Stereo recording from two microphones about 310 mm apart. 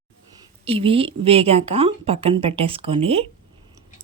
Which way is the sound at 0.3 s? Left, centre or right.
Centre.